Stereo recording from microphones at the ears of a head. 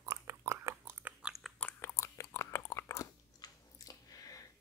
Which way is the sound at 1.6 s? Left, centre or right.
Left.